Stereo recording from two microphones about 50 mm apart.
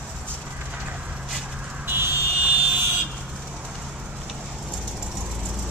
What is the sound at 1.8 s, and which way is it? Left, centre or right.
Buzzer, right.